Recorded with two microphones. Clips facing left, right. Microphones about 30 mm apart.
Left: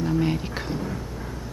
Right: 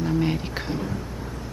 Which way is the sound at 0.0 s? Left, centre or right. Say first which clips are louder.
Even; centre.